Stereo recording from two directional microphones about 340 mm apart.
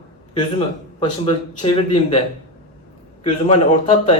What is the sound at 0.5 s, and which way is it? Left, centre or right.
Speech, centre.